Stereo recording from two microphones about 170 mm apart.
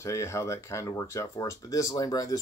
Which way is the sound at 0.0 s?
15° left (ahead or behind).